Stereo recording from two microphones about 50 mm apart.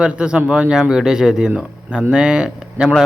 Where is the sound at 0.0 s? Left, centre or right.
Centre.